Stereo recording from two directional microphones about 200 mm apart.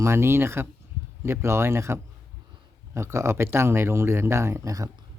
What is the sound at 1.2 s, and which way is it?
Speech, 10° right (ahead or behind).